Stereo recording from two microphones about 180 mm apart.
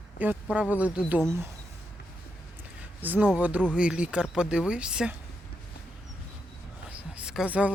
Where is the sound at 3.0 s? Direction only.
10° right (ahead or behind).